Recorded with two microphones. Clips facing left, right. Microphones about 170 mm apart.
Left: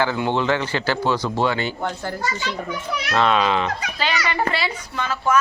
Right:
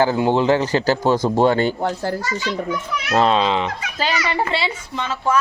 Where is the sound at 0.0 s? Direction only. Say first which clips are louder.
Right 5 dB; 40° right (ahead or behind); by 3.7 s 20° right (ahead or behind).